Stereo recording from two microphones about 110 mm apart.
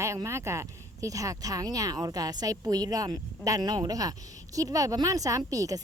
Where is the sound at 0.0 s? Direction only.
25° right (ahead or behind).